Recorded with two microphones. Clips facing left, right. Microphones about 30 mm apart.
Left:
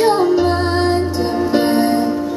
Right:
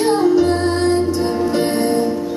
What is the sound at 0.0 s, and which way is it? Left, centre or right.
Music, centre.